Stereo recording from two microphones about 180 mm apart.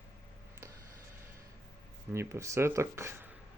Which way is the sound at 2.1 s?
15° right (ahead or behind).